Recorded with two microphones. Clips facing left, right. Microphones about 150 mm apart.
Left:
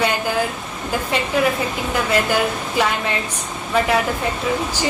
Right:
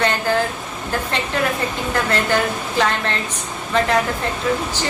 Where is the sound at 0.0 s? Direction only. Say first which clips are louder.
Right 1 dB; 10° left (ahead or behind).